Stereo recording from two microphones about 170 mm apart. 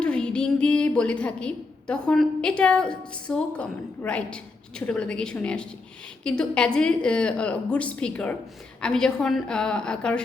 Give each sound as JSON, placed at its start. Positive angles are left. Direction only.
{"t": 0.0, "sound": "a woman's voice", "side_deg": 5}